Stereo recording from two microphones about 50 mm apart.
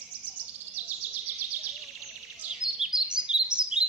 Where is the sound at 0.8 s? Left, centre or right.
Right.